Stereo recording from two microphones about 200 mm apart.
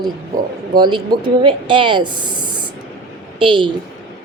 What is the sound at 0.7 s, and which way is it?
Speech, 20° right (ahead or behind).